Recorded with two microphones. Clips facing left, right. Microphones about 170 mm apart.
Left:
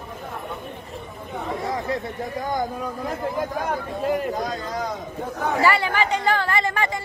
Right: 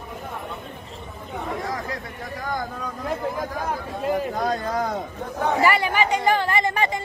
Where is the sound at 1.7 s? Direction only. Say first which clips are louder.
Left 5 dB; 20° left (ahead or behind).